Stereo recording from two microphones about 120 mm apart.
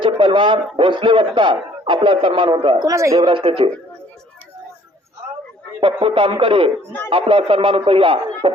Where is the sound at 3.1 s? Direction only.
50° right (ahead or behind).